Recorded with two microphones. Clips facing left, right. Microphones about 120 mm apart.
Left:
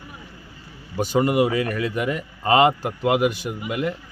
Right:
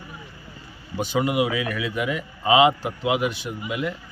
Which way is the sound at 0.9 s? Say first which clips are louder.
Left 3 dB; 40° left (ahead or behind).